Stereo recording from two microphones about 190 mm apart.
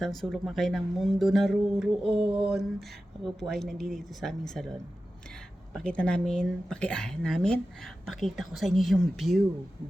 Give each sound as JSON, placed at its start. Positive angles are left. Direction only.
{"t": 0.0, "sound": "speech", "side_deg": 0}
{"t": 2.0, "sound": "a sound", "side_deg": -30}
{"t": 2.5, "sound": "speech", "side_deg": 0}
{"t": 5.7, "sound": "speech", "side_deg": 5}